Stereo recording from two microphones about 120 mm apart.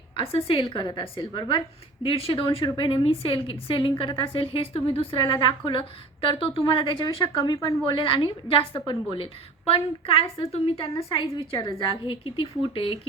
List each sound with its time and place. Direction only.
0.2 s a woman's voice: 50° left (ahead or behind)
7.5 s a woman's voice: 25° left (ahead or behind)
7.9 s a woman's voice: 50° left (ahead or behind)